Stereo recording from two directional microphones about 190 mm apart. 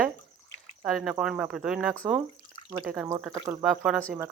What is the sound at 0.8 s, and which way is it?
Speech, centre (ahead or behind).